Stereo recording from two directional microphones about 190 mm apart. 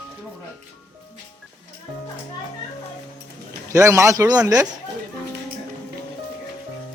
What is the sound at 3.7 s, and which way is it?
Speech, 15° right (ahead or behind).